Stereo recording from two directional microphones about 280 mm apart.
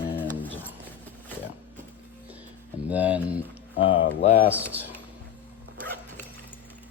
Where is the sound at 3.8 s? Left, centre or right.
Centre.